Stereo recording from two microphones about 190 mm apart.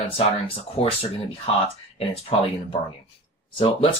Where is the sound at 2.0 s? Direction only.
30° left (ahead or behind).